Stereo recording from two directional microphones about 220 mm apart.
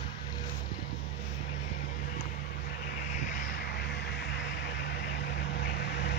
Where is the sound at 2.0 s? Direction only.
45° left (ahead or behind).